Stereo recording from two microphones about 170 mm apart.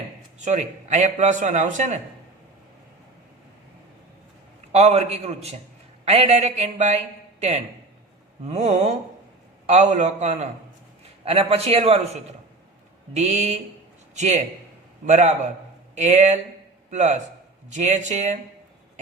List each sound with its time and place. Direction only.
0.3 s a man's voice: 45° right (ahead or behind)
4.7 s a man's voice: 40° right (ahead or behind)